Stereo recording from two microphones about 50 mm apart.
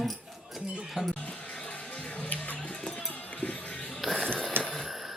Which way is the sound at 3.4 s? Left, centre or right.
Left.